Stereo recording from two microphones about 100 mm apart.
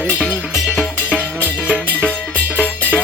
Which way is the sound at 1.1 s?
15° right (ahead or behind).